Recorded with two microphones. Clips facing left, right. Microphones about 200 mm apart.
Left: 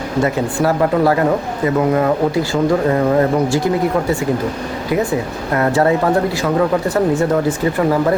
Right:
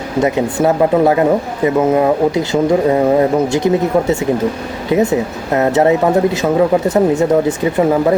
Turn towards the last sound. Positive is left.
turn(degrees=-20)  # may be behind; listen again after turning